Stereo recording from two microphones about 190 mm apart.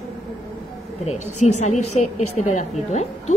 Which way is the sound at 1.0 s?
35° left (ahead or behind).